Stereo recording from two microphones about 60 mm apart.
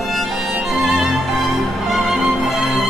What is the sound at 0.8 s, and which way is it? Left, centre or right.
Music, centre.